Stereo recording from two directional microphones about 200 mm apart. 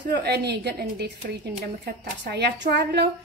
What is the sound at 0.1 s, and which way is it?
A woman's voice, 55° right (ahead or behind).